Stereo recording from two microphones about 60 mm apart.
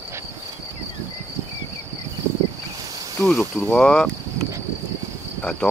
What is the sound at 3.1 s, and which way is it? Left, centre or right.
Cricket, left.